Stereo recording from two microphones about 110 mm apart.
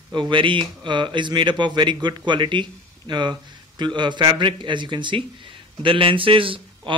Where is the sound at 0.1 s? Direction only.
45° right (ahead or behind).